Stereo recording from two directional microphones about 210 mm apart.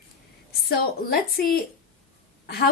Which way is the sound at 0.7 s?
45° left (ahead or behind).